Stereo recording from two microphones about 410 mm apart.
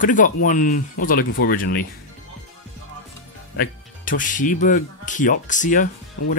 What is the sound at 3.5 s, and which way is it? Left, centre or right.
Speech, centre.